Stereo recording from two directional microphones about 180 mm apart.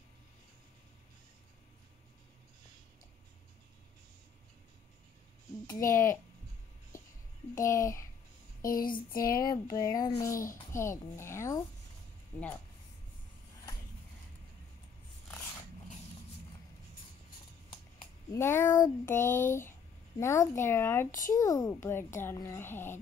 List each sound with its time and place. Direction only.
5.7 s a child's voice: 15° left (ahead or behind)
7.5 s a child's voice: 15° left (ahead or behind)
8.6 s child singing: 50° left (ahead or behind)
9.4 s a child's voice: 20° left (ahead or behind)
18.3 s a child's voice: 15° left (ahead or behind)
21.1 s child singing: 45° left (ahead or behind)
21.4 s a child's voice: 20° left (ahead or behind)